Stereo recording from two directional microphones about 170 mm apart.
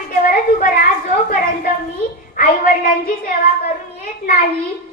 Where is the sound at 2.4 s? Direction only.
60° left (ahead or behind).